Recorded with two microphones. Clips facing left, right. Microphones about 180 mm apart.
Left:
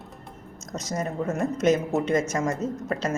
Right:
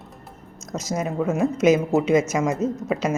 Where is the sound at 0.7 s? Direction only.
5° right (ahead or behind).